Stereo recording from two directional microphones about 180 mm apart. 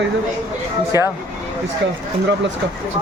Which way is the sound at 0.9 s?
15° right (ahead or behind).